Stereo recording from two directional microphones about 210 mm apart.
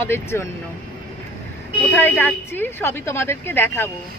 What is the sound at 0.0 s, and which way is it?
Speech, 10° left (ahead or behind).